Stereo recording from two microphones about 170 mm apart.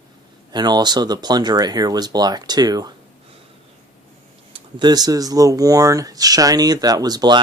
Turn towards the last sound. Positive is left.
turn(degrees=-25)  # may be behind; listen again after turning